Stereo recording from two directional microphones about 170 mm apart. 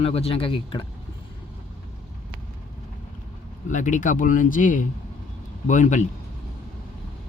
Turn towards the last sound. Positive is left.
turn(degrees=45)  # may be behind; listen again after turning